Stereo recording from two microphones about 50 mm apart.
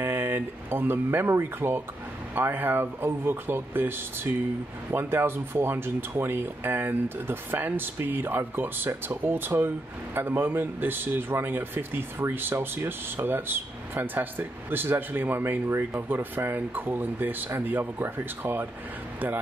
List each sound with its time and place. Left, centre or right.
0.0 s a sound: right
1.6 s speech: right
2.3 s speech: right